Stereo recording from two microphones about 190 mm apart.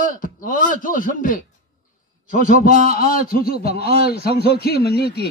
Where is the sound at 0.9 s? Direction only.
45° left (ahead or behind).